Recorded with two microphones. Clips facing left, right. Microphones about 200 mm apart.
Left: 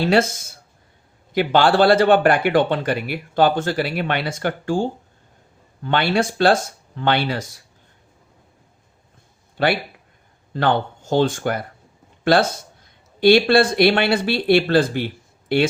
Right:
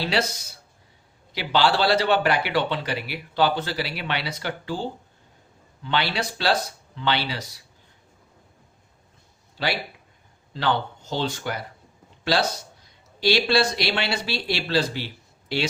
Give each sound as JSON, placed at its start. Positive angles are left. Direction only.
{"t": 0.0, "sound": "speech", "side_deg": 50}
{"t": 9.6, "sound": "speech", "side_deg": 55}